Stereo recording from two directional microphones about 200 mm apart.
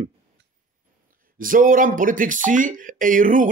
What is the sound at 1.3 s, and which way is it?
Speech, 45° right (ahead or behind).